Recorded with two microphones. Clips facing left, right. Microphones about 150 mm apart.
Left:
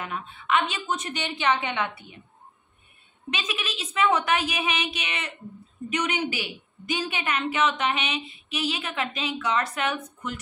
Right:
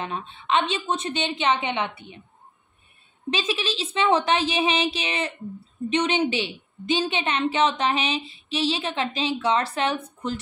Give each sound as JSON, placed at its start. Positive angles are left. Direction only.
{"t": 0.0, "sound": "a woman's voice", "side_deg": -25}
{"t": 3.3, "sound": "a woman's voice", "side_deg": -30}